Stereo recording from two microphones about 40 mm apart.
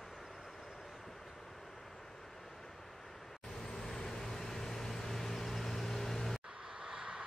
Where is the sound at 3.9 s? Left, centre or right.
Centre.